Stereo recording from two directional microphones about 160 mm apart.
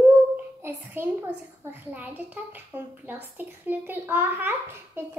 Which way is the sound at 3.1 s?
10° right (ahead or behind).